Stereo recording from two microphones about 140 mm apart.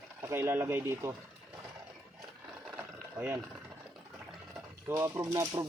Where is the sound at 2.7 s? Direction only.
15° right (ahead or behind).